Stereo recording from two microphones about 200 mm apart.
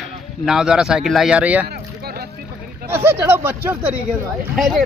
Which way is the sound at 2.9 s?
10° right (ahead or behind).